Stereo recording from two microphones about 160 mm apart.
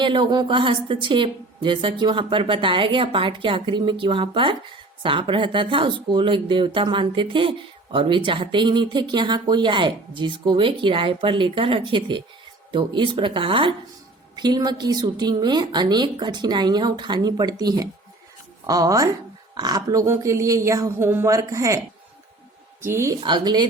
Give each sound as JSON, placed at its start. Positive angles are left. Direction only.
{"t": 0.0, "sound": "a woman's voice", "side_deg": -30}
{"t": 22.8, "sound": "speech", "side_deg": -15}
{"t": 23.2, "sound": "a woman's voice", "side_deg": -30}